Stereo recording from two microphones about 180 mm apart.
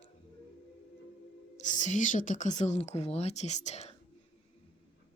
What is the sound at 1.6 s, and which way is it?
Speech, 45° left (ahead or behind).